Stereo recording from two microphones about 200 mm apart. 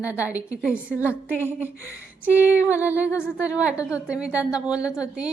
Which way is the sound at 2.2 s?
10° right (ahead or behind).